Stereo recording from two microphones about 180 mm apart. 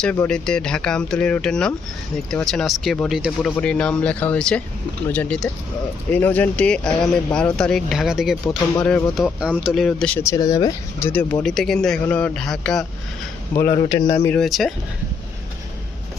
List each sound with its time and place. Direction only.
0.0 s speech: 5° left (ahead or behind); by 11.1 s 20° left (ahead or behind)
11.1 s speech: 10° left (ahead or behind)
13.9 s speech: 20° left (ahead or behind)
14.4 s speech: centre (ahead or behind)